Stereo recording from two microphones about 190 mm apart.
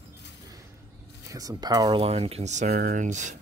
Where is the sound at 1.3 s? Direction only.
20° right (ahead or behind).